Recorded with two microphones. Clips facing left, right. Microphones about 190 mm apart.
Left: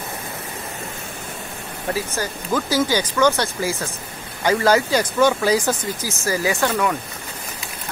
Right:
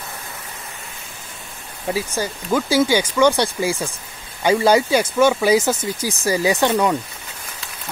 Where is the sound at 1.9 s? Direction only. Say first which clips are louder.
Right 2 dB; 10° right (ahead or behind).